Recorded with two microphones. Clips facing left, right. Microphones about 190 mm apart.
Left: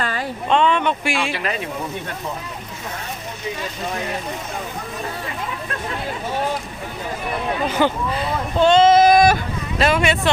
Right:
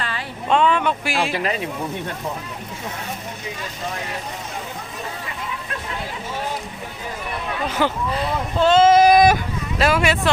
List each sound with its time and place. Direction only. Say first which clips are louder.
0.0 s a sound: left 5 dB; 45° left (ahead or behind)
0.4 s speech: even; 5° right (ahead or behind)
7.7 s speech: even; centre (ahead or behind); by 9.4 s 15° right (ahead or behind)
9.7 s speech: left 1 dB; 5° right (ahead or behind)